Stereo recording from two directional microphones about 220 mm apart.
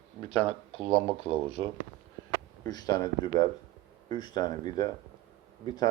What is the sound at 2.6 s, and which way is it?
Speech, 20° left (ahead or behind).